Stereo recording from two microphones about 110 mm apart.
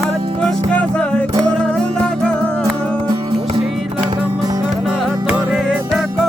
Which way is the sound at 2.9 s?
50° right (ahead or behind).